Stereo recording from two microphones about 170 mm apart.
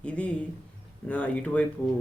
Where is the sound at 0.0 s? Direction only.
5° left (ahead or behind).